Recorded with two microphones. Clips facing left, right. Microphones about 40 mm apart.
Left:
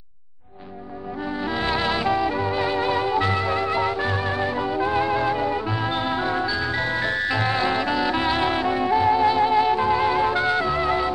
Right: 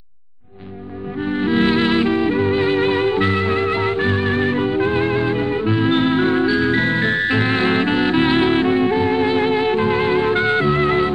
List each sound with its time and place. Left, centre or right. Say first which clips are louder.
1.3 s music: right 8 dB; right